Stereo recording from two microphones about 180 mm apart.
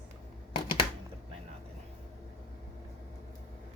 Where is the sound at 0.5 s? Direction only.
25° left (ahead or behind).